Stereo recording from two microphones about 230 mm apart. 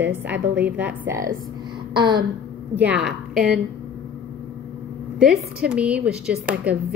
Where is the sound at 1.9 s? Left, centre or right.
Centre.